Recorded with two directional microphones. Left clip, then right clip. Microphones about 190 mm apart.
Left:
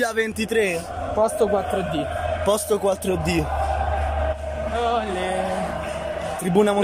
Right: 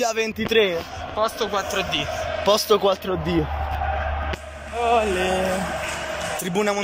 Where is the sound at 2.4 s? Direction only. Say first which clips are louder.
Right 3 dB; 15° left (ahead or behind).